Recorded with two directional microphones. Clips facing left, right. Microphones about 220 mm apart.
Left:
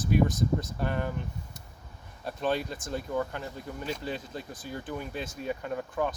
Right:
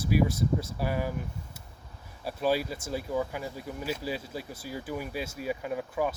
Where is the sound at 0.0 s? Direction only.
10° right (ahead or behind).